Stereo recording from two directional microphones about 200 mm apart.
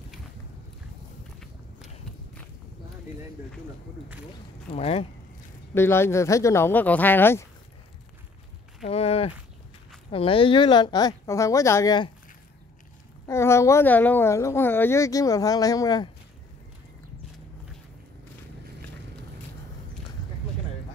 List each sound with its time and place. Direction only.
4.6 s speech: 30° left (ahead or behind)
5.8 s speech: 10° left (ahead or behind)
8.8 s a sound: 30° left (ahead or behind)
10.1 s speech: 25° left (ahead or behind)
13.3 s speech: 15° left (ahead or behind)